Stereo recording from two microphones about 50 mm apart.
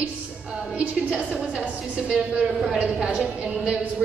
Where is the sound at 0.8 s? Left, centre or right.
Right.